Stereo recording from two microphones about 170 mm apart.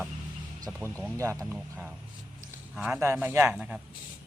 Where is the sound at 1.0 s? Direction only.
15° right (ahead or behind).